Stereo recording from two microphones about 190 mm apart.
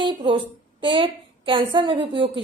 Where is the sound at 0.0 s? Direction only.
25° right (ahead or behind).